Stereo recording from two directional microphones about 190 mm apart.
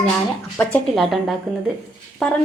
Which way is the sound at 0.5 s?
5° left (ahead or behind).